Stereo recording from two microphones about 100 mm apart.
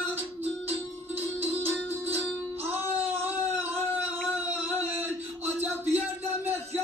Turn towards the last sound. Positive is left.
turn(degrees=-20)  # may be behind; listen again after turning